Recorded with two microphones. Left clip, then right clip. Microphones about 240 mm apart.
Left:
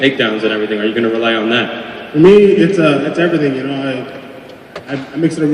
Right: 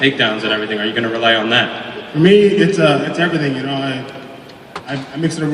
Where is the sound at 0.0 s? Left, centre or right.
Right.